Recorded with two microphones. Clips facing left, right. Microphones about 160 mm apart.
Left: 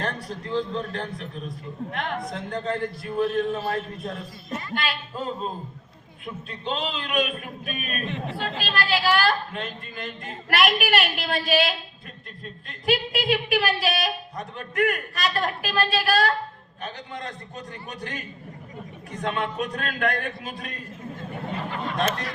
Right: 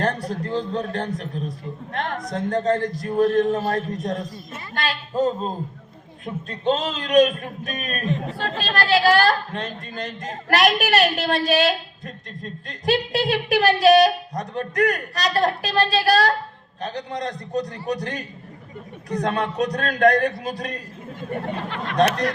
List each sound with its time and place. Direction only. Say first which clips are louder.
0.0 s a man's voice: right 7 dB; 40° right (ahead or behind)